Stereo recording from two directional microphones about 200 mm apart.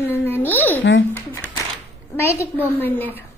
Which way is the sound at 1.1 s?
10° left (ahead or behind).